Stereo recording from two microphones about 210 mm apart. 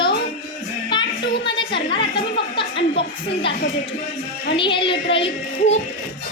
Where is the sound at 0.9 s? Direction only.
20° left (ahead or behind).